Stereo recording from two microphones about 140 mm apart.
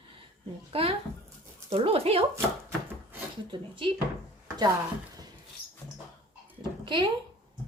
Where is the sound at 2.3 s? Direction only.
15° right (ahead or behind).